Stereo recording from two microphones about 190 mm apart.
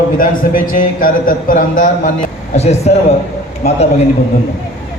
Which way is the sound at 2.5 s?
35° left (ahead or behind).